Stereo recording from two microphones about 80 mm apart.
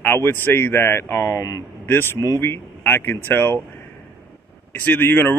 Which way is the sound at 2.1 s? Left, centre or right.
Left.